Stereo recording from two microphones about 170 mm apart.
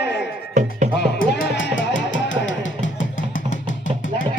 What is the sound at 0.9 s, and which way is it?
Music, 85° left.